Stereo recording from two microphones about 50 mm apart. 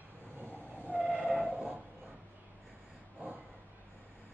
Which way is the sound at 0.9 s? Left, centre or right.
Centre.